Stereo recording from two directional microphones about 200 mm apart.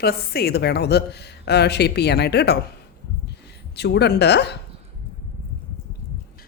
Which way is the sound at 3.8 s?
55° left (ahead or behind).